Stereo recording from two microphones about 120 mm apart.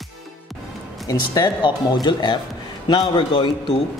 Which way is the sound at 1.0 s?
35° left (ahead or behind).